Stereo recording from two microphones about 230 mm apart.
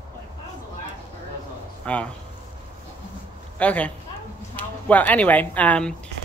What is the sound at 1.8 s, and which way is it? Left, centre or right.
Speech, centre.